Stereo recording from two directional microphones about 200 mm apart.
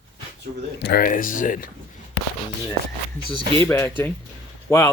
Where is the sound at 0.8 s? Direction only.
50° left (ahead or behind).